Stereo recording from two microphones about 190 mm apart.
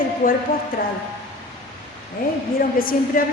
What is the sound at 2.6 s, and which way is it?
Speech, 50° left (ahead or behind).